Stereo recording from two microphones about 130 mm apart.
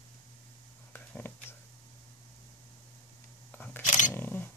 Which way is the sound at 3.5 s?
15° left (ahead or behind).